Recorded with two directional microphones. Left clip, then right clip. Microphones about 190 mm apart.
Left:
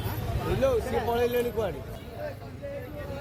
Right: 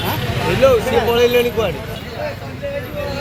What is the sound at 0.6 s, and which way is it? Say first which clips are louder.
Speech: right 13 dB; 65° left (ahead or behind).